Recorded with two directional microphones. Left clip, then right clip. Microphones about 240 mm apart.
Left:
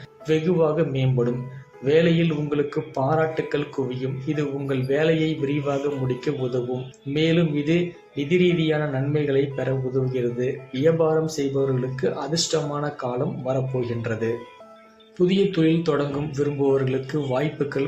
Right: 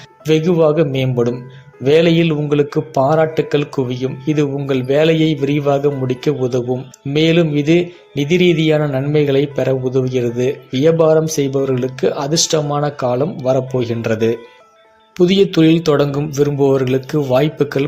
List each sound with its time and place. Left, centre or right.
0.3 s speech: right